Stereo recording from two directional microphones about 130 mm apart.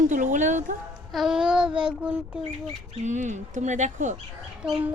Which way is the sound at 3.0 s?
70° right (ahead or behind).